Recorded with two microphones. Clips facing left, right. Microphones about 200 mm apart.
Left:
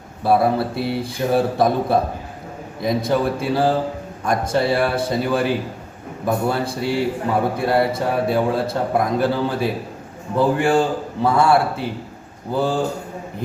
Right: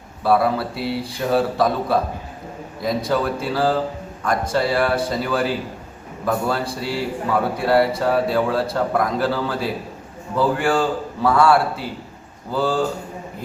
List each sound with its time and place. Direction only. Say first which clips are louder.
0.3 s a man's voice: left 1 dB; 25° left (ahead or behind)